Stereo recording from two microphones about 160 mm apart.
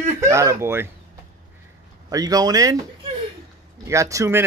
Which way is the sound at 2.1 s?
25° right (ahead or behind).